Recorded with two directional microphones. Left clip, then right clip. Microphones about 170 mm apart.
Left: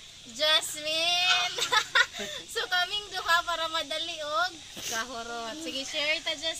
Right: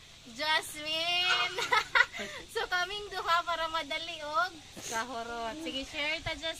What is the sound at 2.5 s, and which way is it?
A woman's voice, 20° right (ahead or behind).